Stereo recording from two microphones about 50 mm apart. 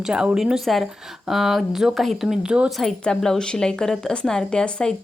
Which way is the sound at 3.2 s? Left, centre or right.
Centre.